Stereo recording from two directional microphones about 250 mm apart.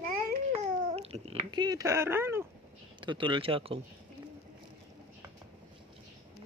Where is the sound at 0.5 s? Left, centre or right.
Right.